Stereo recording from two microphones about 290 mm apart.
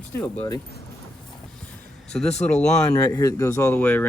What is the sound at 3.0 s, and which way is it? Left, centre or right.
Speech, centre.